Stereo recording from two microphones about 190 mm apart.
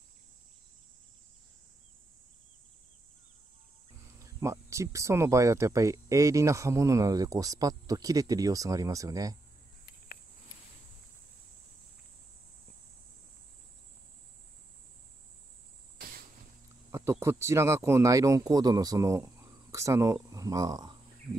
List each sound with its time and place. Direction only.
4.2 s speech: 15° right (ahead or behind)
16.9 s speech: 15° right (ahead or behind)